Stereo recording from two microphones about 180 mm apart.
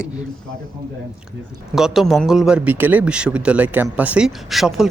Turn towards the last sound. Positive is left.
turn(degrees=0)  # may be behind; listen again after turning